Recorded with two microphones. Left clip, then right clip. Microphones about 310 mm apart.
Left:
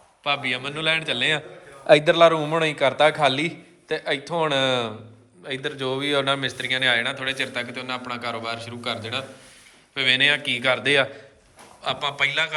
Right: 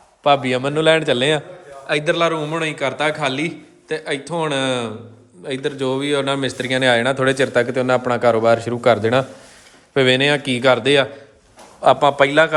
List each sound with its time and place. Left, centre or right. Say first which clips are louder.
0.2 s a man's voice: right 9 dB; centre
1.9 s a man's voice: left 3 dB; centre
11.8 s speech: right 11 dB; right